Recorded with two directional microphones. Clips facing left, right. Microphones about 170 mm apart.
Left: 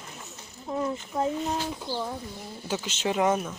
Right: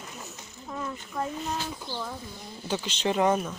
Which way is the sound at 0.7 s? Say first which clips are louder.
Left 6 dB; 25° left (ahead or behind).